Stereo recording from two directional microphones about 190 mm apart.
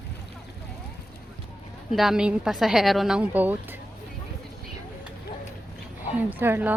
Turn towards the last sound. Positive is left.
turn(degrees=-10)  # may be behind; listen again after turning